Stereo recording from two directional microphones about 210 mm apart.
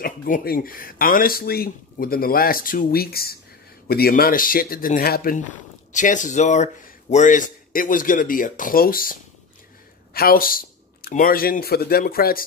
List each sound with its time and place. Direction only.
0.0 s a man's voice: 45° left (ahead or behind)